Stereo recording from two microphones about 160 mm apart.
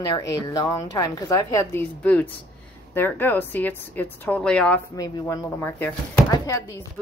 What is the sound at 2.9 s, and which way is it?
A woman's voice, 10° left (ahead or behind).